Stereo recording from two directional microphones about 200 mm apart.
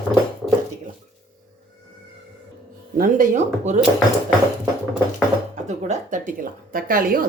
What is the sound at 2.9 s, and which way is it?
Speech, 45° right (ahead or behind).